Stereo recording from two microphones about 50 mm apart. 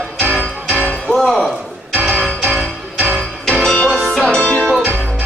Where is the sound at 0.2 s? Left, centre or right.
Right.